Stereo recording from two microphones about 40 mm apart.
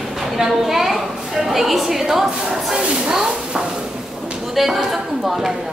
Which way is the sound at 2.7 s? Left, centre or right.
Centre.